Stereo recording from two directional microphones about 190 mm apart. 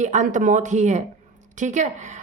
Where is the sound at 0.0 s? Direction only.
40° right (ahead or behind).